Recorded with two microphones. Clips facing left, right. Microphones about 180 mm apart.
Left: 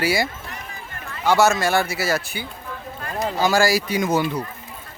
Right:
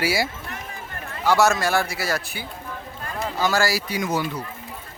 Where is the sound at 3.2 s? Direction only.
15° left (ahead or behind).